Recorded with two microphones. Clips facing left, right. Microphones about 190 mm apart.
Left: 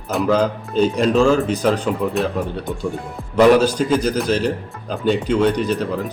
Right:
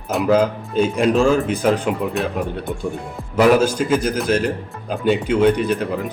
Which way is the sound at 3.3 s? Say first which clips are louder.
Left 2 dB; 5° right (ahead or behind).